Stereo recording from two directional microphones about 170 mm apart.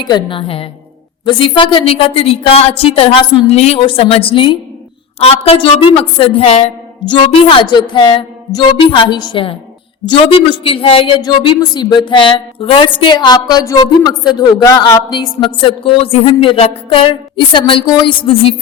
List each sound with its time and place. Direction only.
0.0 s a woman's voice: 30° left (ahead or behind)